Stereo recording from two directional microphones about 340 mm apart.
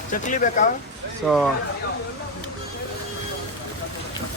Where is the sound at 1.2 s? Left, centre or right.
Centre.